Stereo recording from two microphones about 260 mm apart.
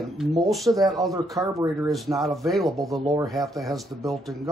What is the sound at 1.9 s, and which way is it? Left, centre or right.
Speech, centre.